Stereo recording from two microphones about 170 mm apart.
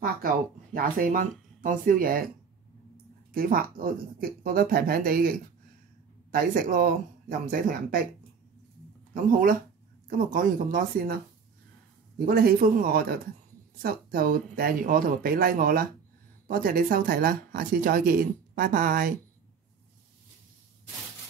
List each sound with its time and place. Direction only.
0.7 s speech: 55° right (ahead or behind)
3.3 s speech: 55° right (ahead or behind)
6.3 s speech: 55° right (ahead or behind)
9.1 s speech: 55° right (ahead or behind)
12.3 s speech: 60° right (ahead or behind)